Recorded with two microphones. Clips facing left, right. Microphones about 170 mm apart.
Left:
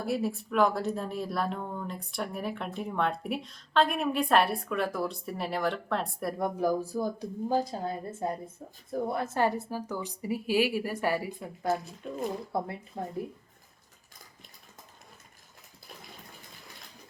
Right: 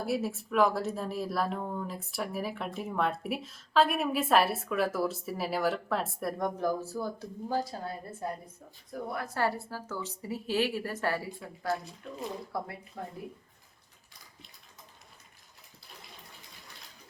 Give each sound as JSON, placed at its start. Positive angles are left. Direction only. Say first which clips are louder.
{"t": 0.0, "sound": "speech", "louder": "left 1 dB", "side_deg": 0}
{"t": 6.6, "sound": "a woman's voice", "louder": "left 3 dB", "side_deg": 10}